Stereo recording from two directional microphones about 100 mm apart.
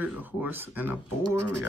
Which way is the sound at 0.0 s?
15° right (ahead or behind).